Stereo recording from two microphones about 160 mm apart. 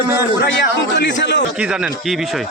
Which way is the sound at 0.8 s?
90° left.